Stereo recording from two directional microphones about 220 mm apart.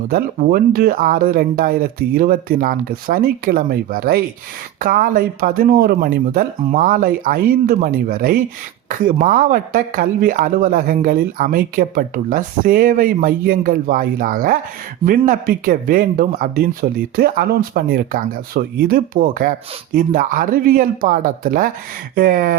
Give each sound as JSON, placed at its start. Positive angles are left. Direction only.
{"t": 0.1, "sound": "speech", "side_deg": -40}